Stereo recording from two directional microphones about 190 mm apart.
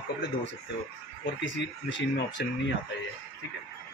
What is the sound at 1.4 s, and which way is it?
Speech, 70° left (ahead or behind).